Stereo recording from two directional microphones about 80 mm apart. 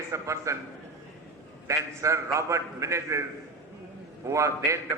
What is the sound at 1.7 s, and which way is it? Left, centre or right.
A man's voice, right.